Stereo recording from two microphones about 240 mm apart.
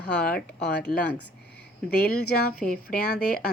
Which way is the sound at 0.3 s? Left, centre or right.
Left.